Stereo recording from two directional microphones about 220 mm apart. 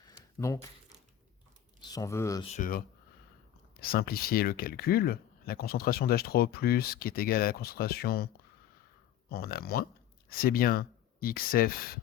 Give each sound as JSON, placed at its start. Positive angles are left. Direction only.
{"t": 0.3, "sound": "speech", "side_deg": 15}
{"t": 1.8, "sound": "speech", "side_deg": 15}
{"t": 2.4, "sound": "speech", "side_deg": 35}
{"t": 9.3, "sound": "speech", "side_deg": 45}